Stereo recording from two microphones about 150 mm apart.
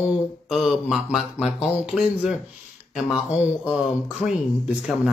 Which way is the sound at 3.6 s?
5° right (ahead or behind).